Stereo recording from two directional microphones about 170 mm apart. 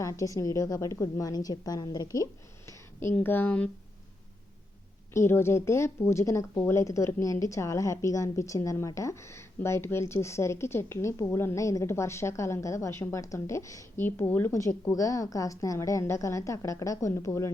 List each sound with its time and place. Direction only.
0.0 s a woman's voice: 20° left (ahead or behind)
5.1 s speech: 15° left (ahead or behind)